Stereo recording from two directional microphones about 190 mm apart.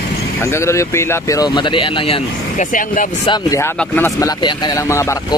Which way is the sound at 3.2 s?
20° left (ahead or behind).